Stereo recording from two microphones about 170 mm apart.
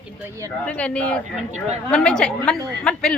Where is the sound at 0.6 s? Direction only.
5° left (ahead or behind).